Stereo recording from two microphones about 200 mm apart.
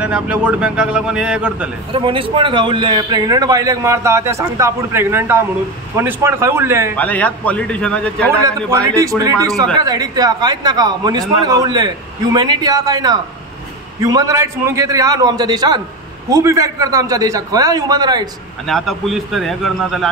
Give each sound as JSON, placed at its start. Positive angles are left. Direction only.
{"t": 0.0, "sound": "a man's voice", "side_deg": -5}
{"t": 1.9, "sound": "a man's voice", "side_deg": -25}
{"t": 7.0, "sound": "a man's voice", "side_deg": 5}
{"t": 8.5, "sound": "a man's voice", "side_deg": -15}
{"t": 18.7, "sound": "a man's voice", "side_deg": 0}